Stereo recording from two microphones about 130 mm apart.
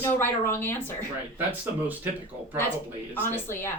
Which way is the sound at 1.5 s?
15° right (ahead or behind).